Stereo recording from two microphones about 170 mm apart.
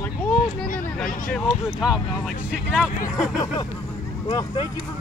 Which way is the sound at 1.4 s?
5° right (ahead or behind).